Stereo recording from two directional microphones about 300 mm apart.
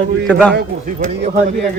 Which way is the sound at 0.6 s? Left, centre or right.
Right.